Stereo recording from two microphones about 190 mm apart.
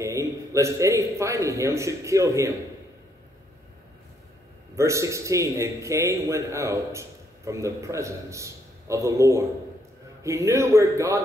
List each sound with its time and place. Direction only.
0.0 s a man's voice: 15° right (ahead or behind)
4.7 s a man's voice: 15° right (ahead or behind)